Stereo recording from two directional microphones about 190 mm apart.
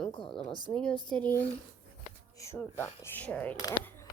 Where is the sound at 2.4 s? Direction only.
15° left (ahead or behind).